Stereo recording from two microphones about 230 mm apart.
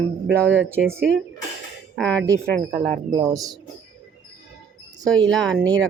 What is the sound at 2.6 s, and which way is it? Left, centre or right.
Speech, right.